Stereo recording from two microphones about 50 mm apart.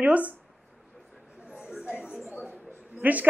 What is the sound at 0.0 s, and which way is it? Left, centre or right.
Speech, right.